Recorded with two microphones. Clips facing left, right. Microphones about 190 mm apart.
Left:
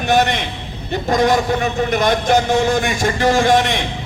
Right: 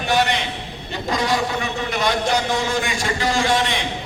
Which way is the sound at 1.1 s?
45° left (ahead or behind).